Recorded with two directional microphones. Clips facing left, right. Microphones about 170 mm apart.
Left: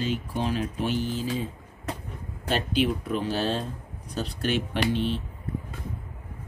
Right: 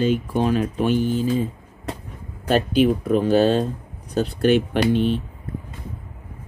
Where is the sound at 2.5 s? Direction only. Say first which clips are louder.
Right 8 dB; 45° right (ahead or behind).